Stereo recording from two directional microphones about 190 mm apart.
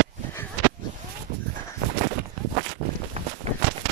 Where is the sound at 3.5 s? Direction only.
35° right (ahead or behind).